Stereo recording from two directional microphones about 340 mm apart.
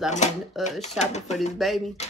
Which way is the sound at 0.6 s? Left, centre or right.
Centre.